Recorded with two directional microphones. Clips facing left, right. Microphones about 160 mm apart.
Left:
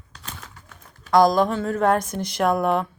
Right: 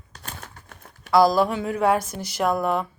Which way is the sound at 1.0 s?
5° right (ahead or behind).